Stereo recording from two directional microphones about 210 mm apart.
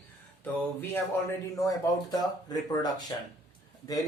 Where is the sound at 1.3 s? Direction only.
15° left (ahead or behind).